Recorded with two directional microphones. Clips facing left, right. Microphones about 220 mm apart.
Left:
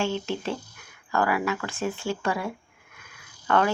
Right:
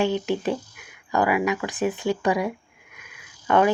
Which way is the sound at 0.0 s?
15° right (ahead or behind).